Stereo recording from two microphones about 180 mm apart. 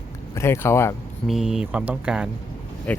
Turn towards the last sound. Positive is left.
turn(degrees=5)  # may be behind; listen again after turning